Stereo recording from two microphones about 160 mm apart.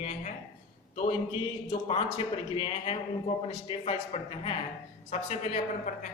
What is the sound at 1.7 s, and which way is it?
A man's voice, 35° left (ahead or behind).